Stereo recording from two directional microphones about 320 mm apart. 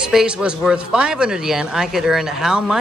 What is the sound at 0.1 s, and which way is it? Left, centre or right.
Speech, centre.